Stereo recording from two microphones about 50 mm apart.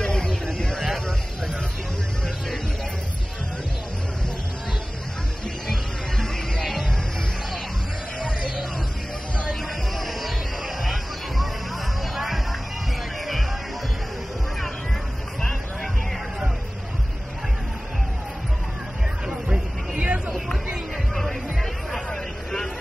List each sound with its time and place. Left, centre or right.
0.0 s a sound: centre
5.7 s music: centre
9.5 s music: centre
19.2 s chatter: centre
21.1 s music: centre
21.9 s vehicle: centre